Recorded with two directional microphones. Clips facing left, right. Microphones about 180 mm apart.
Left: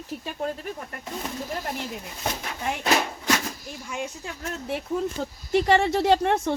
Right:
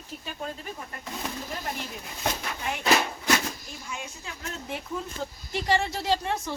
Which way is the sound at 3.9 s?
50° left (ahead or behind).